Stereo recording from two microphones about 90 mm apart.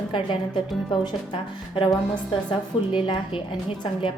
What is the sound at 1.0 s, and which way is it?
A woman's voice, 70° left (ahead or behind).